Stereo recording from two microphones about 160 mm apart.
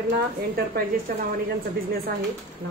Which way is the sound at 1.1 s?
60° right (ahead or behind).